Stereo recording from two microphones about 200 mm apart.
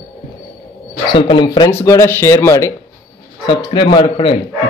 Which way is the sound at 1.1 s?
25° left (ahead or behind).